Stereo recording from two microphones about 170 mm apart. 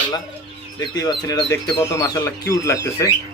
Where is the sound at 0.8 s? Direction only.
20° left (ahead or behind).